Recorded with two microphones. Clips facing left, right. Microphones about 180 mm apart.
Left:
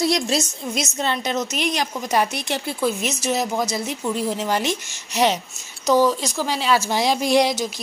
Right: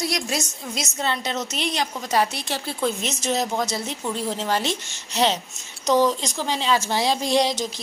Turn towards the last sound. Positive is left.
turn(degrees=10)  # may be behind; listen again after turning